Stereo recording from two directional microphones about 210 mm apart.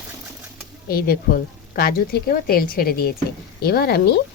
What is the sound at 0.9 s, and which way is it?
Speech, 45° left (ahead or behind).